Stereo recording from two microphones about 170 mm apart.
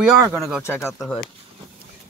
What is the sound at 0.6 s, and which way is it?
Speech, 15° left (ahead or behind).